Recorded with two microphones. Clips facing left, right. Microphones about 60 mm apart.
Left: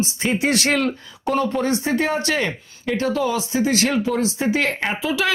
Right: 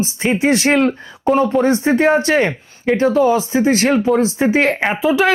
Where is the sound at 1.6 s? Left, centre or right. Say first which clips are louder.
Right 6 dB; right.